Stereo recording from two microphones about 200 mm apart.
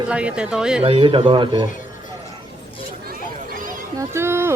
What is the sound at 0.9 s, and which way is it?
Speech, 25° right (ahead or behind).